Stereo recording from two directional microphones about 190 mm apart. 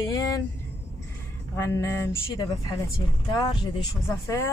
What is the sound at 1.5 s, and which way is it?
Speech, 15° left (ahead or behind).